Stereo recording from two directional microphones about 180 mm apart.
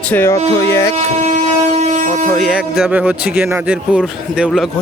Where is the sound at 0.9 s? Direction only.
40° right (ahead or behind).